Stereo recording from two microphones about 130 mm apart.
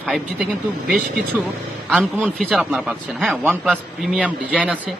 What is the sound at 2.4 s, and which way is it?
A man's voice, centre (ahead or behind).